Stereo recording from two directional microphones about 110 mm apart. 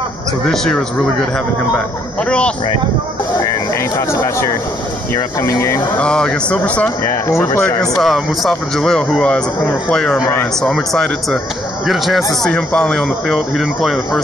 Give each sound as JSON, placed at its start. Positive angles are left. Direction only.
{"t": 2.2, "sound": "speech", "side_deg": 10}
{"t": 5.1, "sound": "speech", "side_deg": 25}
{"t": 5.9, "sound": "speech", "side_deg": 5}
{"t": 7.2, "sound": "speech", "side_deg": 25}
{"t": 7.9, "sound": "speech", "side_deg": 0}